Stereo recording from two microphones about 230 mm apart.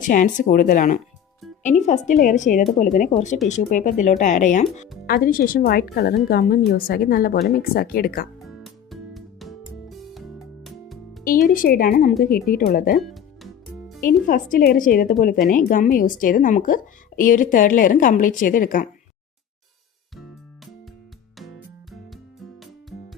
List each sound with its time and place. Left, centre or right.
0.0 s speech: left
8.4 s music: centre
11.2 s speech: left
13.0 s music: centre
14.3 s speech: left
22.6 s music: centre